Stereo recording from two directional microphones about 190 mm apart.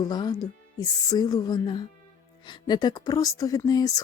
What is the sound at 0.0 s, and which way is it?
Speech, 20° left (ahead or behind).